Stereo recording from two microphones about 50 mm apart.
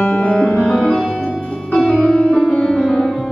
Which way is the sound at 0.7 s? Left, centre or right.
Centre.